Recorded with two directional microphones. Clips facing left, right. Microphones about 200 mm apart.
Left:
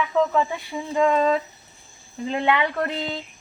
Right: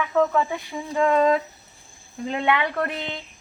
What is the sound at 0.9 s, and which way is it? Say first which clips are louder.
Speech: right 1 dB; 5° right (ahead or behind).